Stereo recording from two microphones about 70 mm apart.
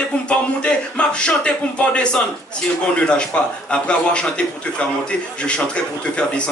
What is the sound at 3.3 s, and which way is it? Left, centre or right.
Speech, centre.